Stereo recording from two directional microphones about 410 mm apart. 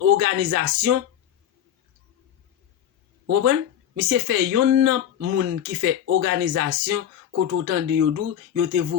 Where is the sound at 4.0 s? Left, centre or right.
Right.